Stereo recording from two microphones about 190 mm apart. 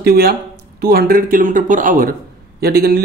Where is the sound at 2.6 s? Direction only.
55° right (ahead or behind).